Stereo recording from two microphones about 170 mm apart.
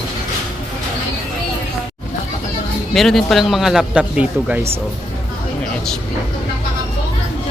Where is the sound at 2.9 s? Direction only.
Centre (ahead or behind).